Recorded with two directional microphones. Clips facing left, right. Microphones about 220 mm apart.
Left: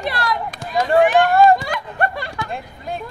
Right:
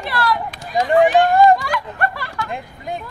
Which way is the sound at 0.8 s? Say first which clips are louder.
Right 1 dB; 15° right (ahead or behind).